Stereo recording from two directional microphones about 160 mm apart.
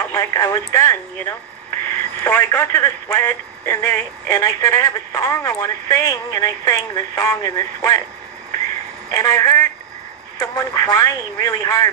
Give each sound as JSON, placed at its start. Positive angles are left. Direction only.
{"t": 0.0, "sound": "speech", "side_deg": 15}
{"t": 9.1, "sound": "speech", "side_deg": 20}